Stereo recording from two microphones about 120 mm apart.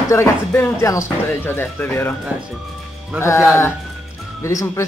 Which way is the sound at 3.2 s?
25° left (ahead or behind).